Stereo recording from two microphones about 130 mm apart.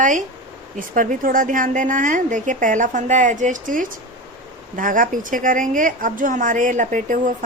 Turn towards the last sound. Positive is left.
turn(degrees=-75)  # may be behind; listen again after turning